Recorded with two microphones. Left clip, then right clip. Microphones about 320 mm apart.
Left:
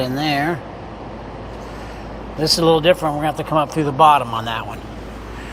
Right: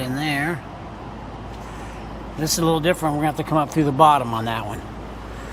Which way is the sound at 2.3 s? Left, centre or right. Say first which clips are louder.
Left 6 dB; centre.